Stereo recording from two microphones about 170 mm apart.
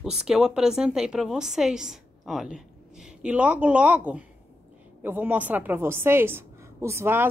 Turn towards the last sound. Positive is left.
turn(degrees=-15)  # may be behind; listen again after turning